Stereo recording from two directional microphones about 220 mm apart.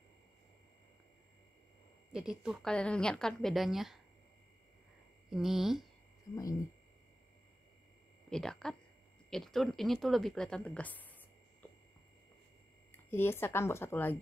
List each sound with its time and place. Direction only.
2.1 s speech: 5° right (ahead or behind)
5.3 s speech: centre (ahead or behind)
6.3 s speech: 15° left (ahead or behind)
8.3 s speech: 5° left (ahead or behind)
12.9 s speech: 10° left (ahead or behind)